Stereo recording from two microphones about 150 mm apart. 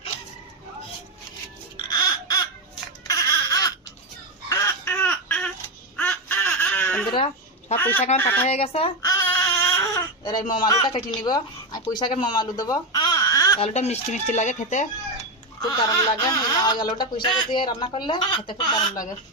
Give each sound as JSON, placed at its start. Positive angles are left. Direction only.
{"t": 1.9, "sound": "a sound", "side_deg": 25}
{"t": 3.1, "sound": "baby cry", "side_deg": 25}
{"t": 4.4, "sound": "a sound", "side_deg": 20}
{"t": 6.0, "sound": "baby laughter", "side_deg": 10}
{"t": 7.8, "sound": "speech", "side_deg": 15}
{"t": 8.4, "sound": "speech", "side_deg": 45}
{"t": 9.0, "sound": "babbling", "side_deg": 25}
{"t": 9.4, "sound": "baby cry", "side_deg": 20}
{"t": 10.7, "sound": "speech", "side_deg": 25}
{"t": 12.2, "sound": "baby cry", "side_deg": 30}
{"t": 13.6, "sound": "speech", "side_deg": 45}
{"t": 15.6, "sound": "speech", "side_deg": 25}